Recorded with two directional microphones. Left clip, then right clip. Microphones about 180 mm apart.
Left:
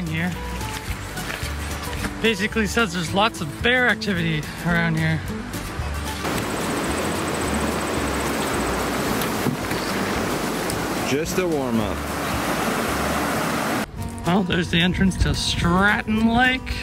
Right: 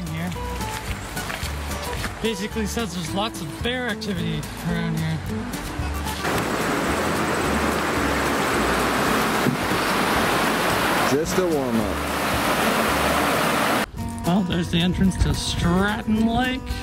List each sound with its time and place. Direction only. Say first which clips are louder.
2.2 s speech: left 6 dB; 10° right (ahead or behind)
6.2 s a sound: right 2 dB; centre (ahead or behind)
7.5 s vehicle: right 2 dB; centre (ahead or behind)
8.8 s vehicle: right 3 dB; 15° right (ahead or behind)
9.7 s waves: right 3 dB; centre (ahead or behind)
9.9 s pink noise: right 4 dB; 15° right (ahead or behind)
10.6 s a sound: right 5 dB; centre (ahead or behind)
11.7 s pink noise: right 1 dB; centre (ahead or behind)
14.2 s speech: left 3 dB; 15° right (ahead or behind)